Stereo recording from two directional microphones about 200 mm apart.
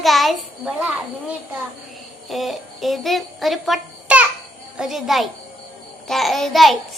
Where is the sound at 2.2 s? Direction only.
Centre (ahead or behind).